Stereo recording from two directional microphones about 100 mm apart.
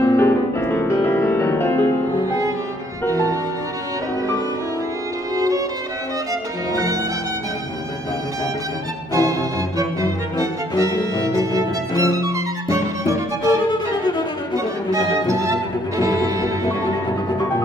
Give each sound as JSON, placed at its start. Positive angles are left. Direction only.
{"t": 0.0, "sound": "music", "side_deg": 25}
{"t": 3.1, "sound": "music", "side_deg": -35}
{"t": 6.7, "sound": "music", "side_deg": -35}
{"t": 9.1, "sound": "music", "side_deg": -35}
{"t": 13.7, "sound": "violin", "side_deg": 45}
{"t": 14.9, "sound": "music", "side_deg": -35}